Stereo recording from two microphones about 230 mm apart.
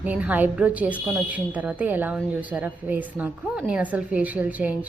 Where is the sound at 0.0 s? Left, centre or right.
Centre.